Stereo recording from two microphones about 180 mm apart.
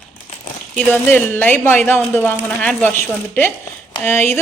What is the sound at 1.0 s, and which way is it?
Speech, 10° left (ahead or behind).